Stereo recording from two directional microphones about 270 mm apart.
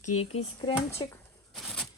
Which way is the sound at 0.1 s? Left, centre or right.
Left.